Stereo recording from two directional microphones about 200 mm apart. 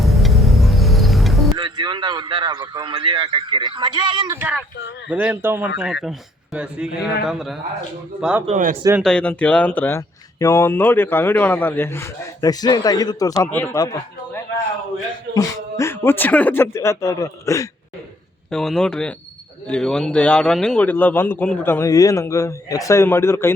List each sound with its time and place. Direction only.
0.0 s music: centre (ahead or behind)
1.5 s a man's voice: 20° right (ahead or behind)
4.4 s speech: 5° right (ahead or behind)
8.4 s speech: 35° right (ahead or behind)
9.0 s a man's voice: 5° left (ahead or behind)
18.5 s a man's voice: 5° left (ahead or behind)